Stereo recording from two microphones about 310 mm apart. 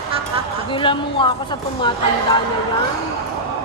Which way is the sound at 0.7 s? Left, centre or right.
Centre.